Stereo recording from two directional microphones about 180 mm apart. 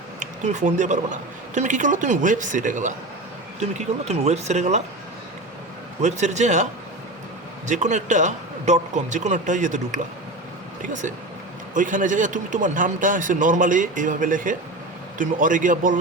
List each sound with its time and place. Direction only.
0.2 s a man's voice: 40° right (ahead or behind)
6.0 s speech: 40° right (ahead or behind)
7.7 s a man's voice: 40° right (ahead or behind)